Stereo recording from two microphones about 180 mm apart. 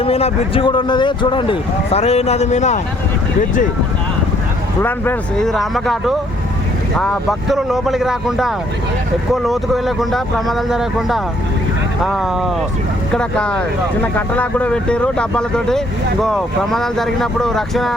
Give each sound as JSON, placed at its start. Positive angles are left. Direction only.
{"t": 0.0, "sound": "speech", "side_deg": 30}
{"t": 4.8, "sound": "speech", "side_deg": 10}